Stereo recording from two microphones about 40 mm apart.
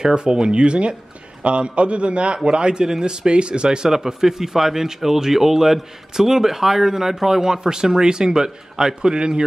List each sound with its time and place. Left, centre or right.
0.0 s a man's voice: right